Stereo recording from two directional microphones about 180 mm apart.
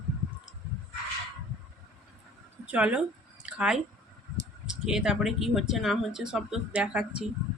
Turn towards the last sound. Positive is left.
turn(degrees=-5)  # may be behind; listen again after turning